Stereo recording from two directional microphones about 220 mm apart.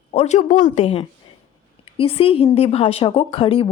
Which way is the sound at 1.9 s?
25° left (ahead or behind).